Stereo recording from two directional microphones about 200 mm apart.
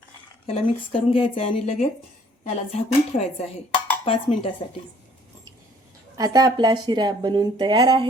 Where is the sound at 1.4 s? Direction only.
35° left (ahead or behind).